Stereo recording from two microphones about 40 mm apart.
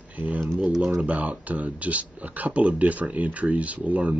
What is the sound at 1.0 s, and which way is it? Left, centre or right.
Speech, right.